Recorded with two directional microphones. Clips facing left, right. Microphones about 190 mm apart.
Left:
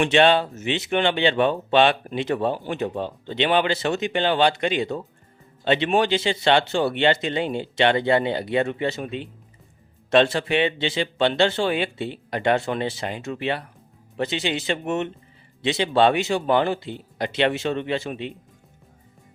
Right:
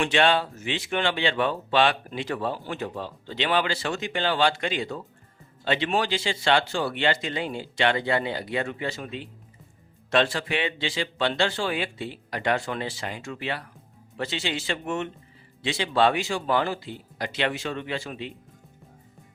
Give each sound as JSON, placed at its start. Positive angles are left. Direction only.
{"t": 0.0, "sound": "speech", "side_deg": 20}